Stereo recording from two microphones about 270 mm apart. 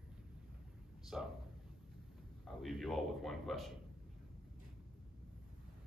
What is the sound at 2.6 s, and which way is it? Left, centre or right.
Speech, centre.